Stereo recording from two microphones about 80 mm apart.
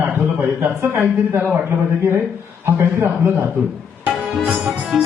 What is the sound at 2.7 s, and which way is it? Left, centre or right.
Speech, right.